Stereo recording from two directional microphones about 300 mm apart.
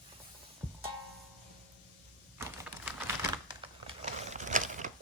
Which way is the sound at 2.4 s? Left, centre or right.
Centre.